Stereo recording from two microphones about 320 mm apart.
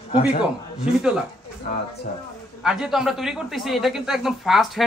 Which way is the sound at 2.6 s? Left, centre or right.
Centre.